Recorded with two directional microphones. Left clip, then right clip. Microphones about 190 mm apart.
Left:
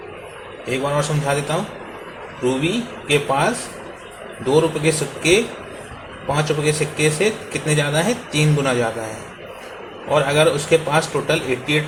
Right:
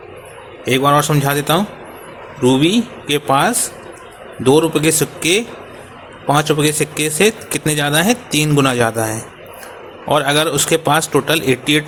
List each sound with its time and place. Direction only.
0.6 s speech: 60° right (ahead or behind)
2.4 s a man's voice: 70° right (ahead or behind)
3.1 s speech: 60° right (ahead or behind)
10.1 s speech: 60° right (ahead or behind)